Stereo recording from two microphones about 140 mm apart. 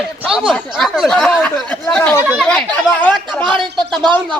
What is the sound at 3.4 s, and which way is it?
Speech, 35° right (ahead or behind).